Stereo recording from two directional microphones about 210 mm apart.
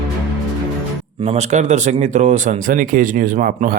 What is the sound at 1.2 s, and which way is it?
Speech, 30° right (ahead or behind).